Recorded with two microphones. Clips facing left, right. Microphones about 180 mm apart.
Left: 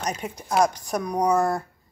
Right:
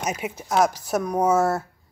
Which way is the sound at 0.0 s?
5° right (ahead or behind).